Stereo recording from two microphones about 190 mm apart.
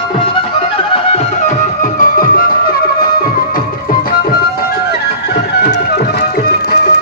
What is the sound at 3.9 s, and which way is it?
Tabla, 50° left (ahead or behind).